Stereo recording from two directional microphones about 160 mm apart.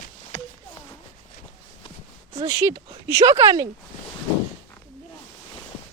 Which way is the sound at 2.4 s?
30° right (ahead or behind).